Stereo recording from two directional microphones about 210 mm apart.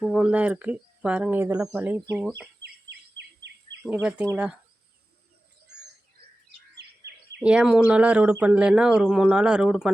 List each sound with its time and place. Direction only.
0.0 s speech: 5° right (ahead or behind)
2.6 s bird vocalization: 55° right (ahead or behind)
3.8 s speech: 5° right (ahead or behind)
6.7 s bird vocalization: 55° right (ahead or behind)
7.3 s speech: 5° right (ahead or behind)